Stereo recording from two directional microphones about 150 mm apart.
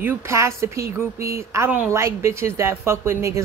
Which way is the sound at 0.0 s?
20° right (ahead or behind).